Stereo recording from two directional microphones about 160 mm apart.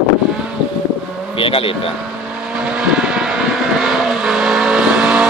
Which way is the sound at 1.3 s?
35° left (ahead or behind).